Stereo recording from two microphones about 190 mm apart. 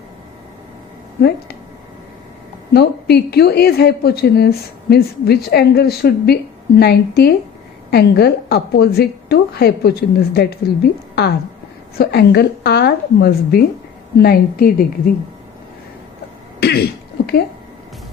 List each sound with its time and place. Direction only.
2.7 s a woman's voice: 60° left (ahead or behind)
11.1 s a sound: 60° left (ahead or behind)
11.9 s a woman's voice: 60° left (ahead or behind)
16.6 s speech: 55° left (ahead or behind)